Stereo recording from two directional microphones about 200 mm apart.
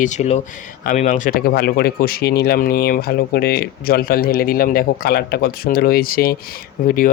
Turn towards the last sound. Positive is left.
turn(degrees=45)  # may be behind; listen again after turning